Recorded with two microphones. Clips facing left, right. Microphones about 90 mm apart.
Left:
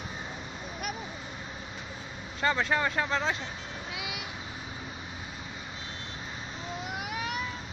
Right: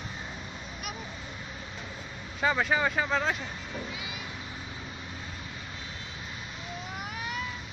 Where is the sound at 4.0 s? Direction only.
75° left (ahead or behind).